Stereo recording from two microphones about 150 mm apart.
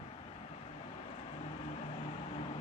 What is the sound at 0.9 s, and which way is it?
Vehicle, 40° left (ahead or behind).